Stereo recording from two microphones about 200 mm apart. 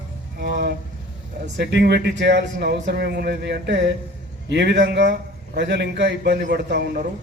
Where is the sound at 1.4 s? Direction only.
55° right (ahead or behind).